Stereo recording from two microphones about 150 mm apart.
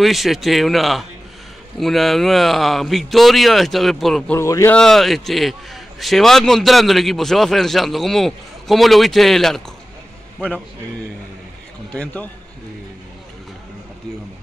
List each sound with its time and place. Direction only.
0.0 s a man's voice: centre (ahead or behind)
4.4 s speech: 20° left (ahead or behind)
4.7 s a man's voice: centre (ahead or behind)
11.9 s speech: 10° left (ahead or behind)